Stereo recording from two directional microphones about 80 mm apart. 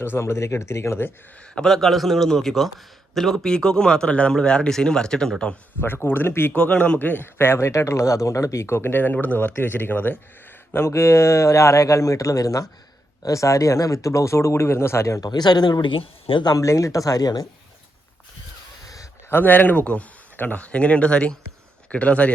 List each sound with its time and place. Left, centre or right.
0.0 s speech: left
1.5 s a man's voice: centre
5.8 s speech: left
6.6 s speech: centre; by 15.2 s left
15.2 s speech: left
16.5 s speech: left
19.3 s speech: left